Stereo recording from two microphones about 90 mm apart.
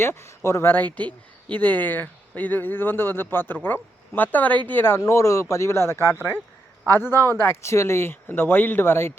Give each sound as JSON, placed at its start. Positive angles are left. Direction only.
{"t": 0.0, "sound": "speech", "side_deg": 30}
{"t": 0.7, "sound": "speech", "side_deg": 20}